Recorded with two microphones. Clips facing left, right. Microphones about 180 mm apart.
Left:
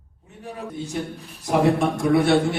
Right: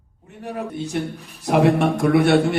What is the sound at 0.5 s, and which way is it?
A man's voice, 70° right (ahead or behind).